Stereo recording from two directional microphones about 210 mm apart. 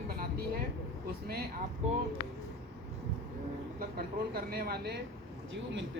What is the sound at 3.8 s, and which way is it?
A woman's voice, 45° right (ahead or behind).